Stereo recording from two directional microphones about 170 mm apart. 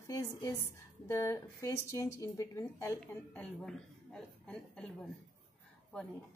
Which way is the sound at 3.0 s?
5° left (ahead or behind).